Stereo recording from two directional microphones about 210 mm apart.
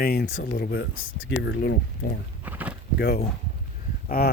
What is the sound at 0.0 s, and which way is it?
Speech, 50° left (ahead or behind).